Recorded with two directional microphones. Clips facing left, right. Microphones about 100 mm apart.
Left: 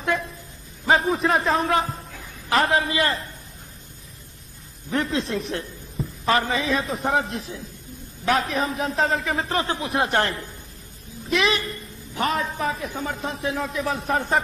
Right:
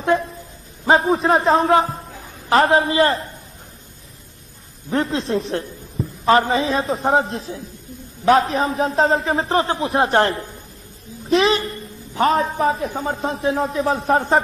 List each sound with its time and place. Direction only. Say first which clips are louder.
0.0 s a man's voice: right 6 dB; 30° right (ahead or behind)
4.9 s a woman's voice: right 4 dB; 30° right (ahead or behind)